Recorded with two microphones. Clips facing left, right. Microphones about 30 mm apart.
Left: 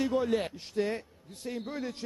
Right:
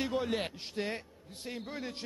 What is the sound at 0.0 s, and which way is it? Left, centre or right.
A man's voice, right.